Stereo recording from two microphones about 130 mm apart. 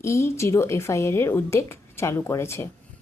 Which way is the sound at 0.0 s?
20° left (ahead or behind).